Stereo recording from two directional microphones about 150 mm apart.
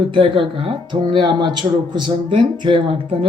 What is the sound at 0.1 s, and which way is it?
Speech, 35° right (ahead or behind).